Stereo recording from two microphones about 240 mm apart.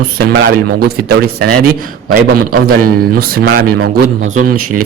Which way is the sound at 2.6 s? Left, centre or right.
Right.